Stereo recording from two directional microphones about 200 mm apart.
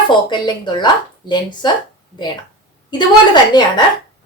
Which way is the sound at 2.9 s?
20° left (ahead or behind).